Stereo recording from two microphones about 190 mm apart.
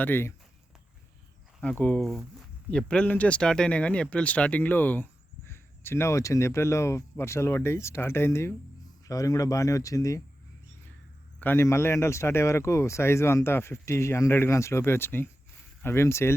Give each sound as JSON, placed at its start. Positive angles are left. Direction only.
{"t": 0.0, "sound": "speech", "side_deg": 10}
{"t": 1.8, "sound": "speech", "side_deg": 5}
{"t": 11.3, "sound": "speech", "side_deg": 10}